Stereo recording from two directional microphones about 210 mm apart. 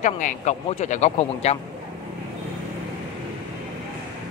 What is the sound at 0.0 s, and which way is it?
A man's voice, 35° left (ahead or behind).